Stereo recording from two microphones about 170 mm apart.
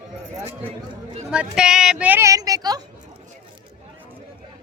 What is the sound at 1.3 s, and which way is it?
Speech, 5° right (ahead or behind).